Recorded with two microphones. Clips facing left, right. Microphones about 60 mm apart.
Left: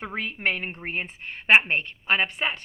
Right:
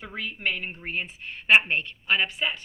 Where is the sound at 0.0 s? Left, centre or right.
Left.